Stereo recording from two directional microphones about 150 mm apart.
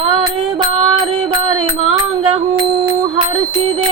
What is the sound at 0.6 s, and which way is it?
Music, 40° right (ahead or behind).